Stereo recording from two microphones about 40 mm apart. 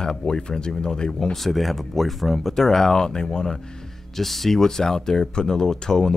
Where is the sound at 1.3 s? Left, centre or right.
Centre.